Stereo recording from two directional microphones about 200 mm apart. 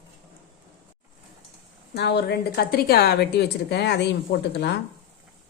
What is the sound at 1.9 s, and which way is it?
A woman's voice, 55° left (ahead or behind).